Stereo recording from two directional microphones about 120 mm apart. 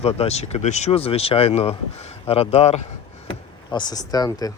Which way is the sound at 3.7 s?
35° left (ahead or behind).